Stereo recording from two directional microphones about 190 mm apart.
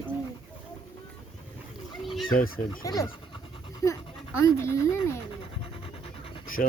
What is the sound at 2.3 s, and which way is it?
Speech, 45° left (ahead or behind).